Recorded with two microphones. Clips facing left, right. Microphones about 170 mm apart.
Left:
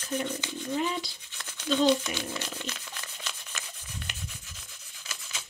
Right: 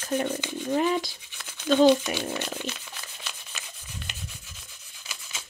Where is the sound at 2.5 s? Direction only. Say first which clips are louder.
Right 4 dB; 15° right (ahead or behind).